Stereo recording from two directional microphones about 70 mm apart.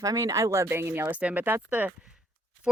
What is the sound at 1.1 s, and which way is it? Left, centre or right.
Speech, right.